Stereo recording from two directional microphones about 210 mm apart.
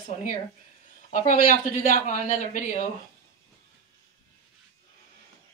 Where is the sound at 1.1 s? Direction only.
40° left (ahead or behind).